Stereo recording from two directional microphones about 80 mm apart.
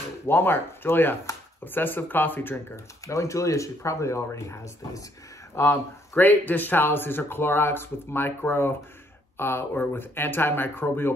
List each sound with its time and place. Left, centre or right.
0.3 s speech: left
3.1 s speech: left
5.6 s speech: left